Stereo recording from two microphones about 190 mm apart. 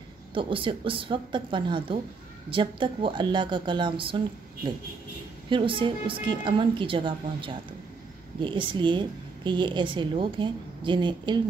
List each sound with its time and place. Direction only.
0.3 s a woman's voice: 25° right (ahead or behind)
5.5 s a woman's voice: 25° right (ahead or behind)